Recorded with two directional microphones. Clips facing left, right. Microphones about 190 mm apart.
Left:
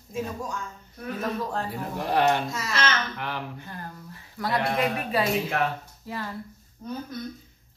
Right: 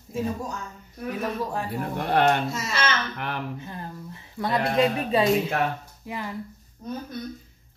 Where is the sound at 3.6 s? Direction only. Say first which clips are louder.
Right 3 dB; 20° right (ahead or behind).